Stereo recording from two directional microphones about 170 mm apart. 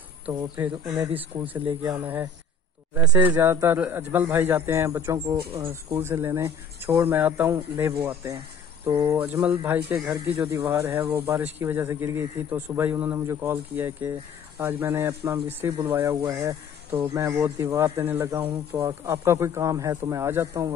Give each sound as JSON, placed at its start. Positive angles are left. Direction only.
{"t": 0.3, "sound": "speech", "side_deg": -10}